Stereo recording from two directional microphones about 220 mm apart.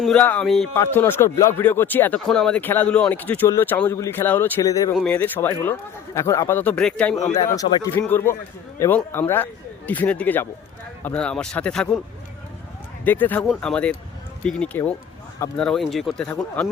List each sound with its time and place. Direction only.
0.0 s speech: 5° left (ahead or behind)
7.3 s speech: 15° left (ahead or behind)
13.1 s speech: 10° left (ahead or behind)